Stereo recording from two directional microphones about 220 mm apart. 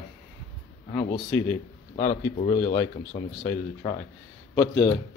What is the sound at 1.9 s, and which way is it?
Speech, 35° left (ahead or behind).